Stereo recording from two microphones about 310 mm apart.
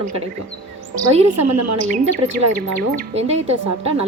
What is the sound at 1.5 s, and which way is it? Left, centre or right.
Speech, right.